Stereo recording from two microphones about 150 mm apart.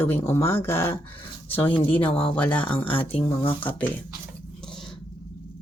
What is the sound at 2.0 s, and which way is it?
Speech, 10° left (ahead or behind).